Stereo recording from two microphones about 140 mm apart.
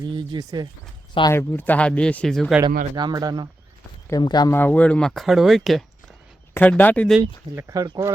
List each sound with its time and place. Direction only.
0.0 s speech: 30° right (ahead or behind)
1.3 s speech: 15° left (ahead or behind)
2.9 s speech: 30° right (ahead or behind)
4.1 s speech: 30° left (ahead or behind)
4.5 s speech: 10° left (ahead or behind)
6.5 s speech: 10° left (ahead or behind)
7.2 s speech: 20° right (ahead or behind)